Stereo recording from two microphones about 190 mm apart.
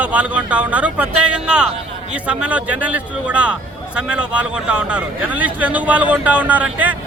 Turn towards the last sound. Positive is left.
turn(degrees=-10)  # may be behind; listen again after turning